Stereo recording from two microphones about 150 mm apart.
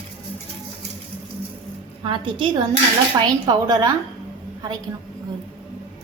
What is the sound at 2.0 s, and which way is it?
A woman's voice, 35° right (ahead or behind).